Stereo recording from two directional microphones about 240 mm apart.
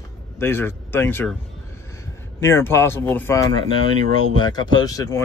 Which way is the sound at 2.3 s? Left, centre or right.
Centre.